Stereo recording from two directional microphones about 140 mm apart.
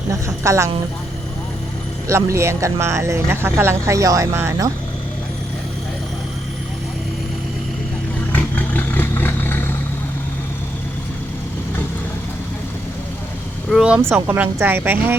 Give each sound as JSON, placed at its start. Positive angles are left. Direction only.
{"t": 0.4, "sound": "speech", "side_deg": -20}
{"t": 2.0, "sound": "speech", "side_deg": -20}
{"t": 8.4, "sound": "vehicle", "side_deg": 10}
{"t": 13.7, "sound": "a woman's voice", "side_deg": -5}